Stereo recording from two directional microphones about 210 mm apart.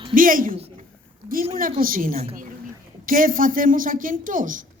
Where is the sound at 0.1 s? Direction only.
40° right (ahead or behind).